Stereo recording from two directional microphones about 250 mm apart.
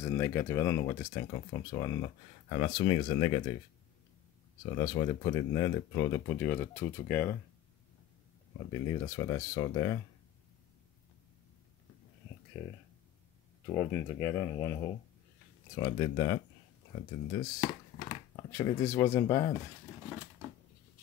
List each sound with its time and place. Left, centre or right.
0.0 s speech: centre
4.7 s speech: centre
8.7 s speech: centre
12.6 s speech: centre
17.6 s crumpling: left
18.3 s speech: centre